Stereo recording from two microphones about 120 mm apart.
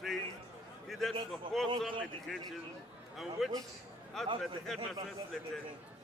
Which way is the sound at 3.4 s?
Centre (ahead or behind).